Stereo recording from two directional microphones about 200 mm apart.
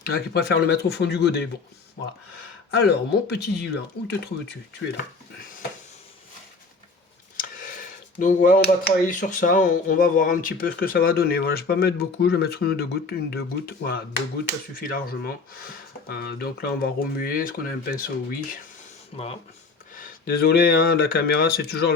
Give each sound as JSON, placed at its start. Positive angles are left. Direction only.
{"t": 0.0, "sound": "speech", "side_deg": 50}
{"t": 2.8, "sound": "speech", "side_deg": 55}
{"t": 7.3, "sound": "speech", "side_deg": 40}
{"t": 19.1, "sound": "speech", "side_deg": 30}
{"t": 20.0, "sound": "speech", "side_deg": 50}